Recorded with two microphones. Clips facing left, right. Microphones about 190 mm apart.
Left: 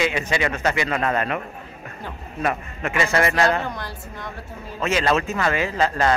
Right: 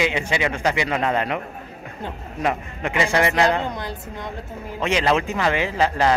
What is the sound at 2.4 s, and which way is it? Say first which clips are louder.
A woman's voice: right 1 dB; 15° right (ahead or behind).